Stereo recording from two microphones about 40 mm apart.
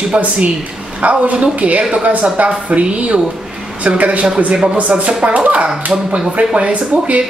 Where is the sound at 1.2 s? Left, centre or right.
Right.